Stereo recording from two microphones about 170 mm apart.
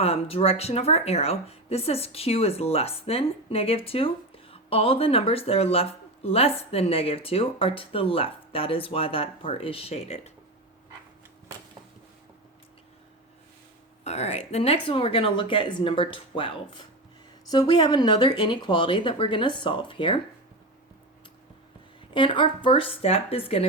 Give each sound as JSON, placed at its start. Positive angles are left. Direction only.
{"t": 0.0, "sound": "speech", "side_deg": 35}
{"t": 14.0, "sound": "speech", "side_deg": 40}
{"t": 22.1, "sound": "speech", "side_deg": 30}